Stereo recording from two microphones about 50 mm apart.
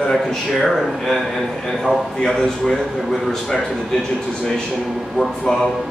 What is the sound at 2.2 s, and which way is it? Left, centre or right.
A man's voice, centre.